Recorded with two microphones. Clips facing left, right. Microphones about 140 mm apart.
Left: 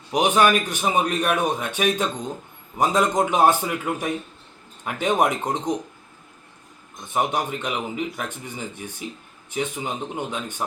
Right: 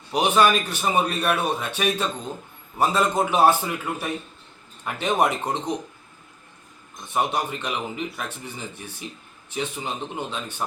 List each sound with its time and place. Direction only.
0.1 s a man's voice: 15° left (ahead or behind)
7.1 s a man's voice: 15° left (ahead or behind)